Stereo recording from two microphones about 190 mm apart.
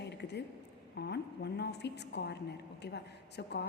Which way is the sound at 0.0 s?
60° left (ahead or behind).